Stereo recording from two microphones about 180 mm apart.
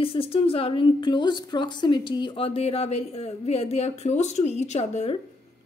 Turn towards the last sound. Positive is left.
turn(degrees=35)  # may be behind; listen again after turning